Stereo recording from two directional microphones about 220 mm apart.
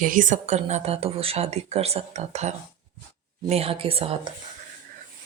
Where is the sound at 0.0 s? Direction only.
35° right (ahead or behind).